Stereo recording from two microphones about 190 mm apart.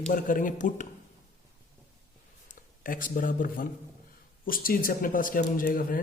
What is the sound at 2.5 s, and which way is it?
Speech, 45° left (ahead or behind).